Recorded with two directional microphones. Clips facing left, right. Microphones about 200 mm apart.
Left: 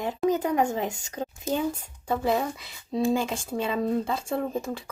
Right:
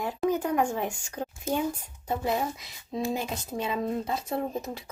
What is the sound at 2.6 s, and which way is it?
Speech, 30° left (ahead or behind).